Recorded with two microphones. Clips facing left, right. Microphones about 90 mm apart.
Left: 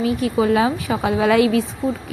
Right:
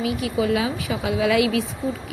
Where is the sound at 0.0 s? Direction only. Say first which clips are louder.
Left 4 dB; 40° left (ahead or behind).